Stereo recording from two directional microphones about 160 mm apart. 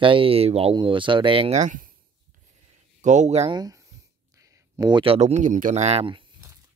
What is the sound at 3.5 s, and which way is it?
Speech, 25° right (ahead or behind).